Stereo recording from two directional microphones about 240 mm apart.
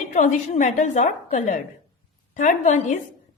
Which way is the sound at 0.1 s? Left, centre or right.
Left.